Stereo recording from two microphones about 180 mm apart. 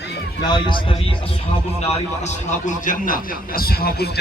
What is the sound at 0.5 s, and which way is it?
Speech, 25° left (ahead or behind).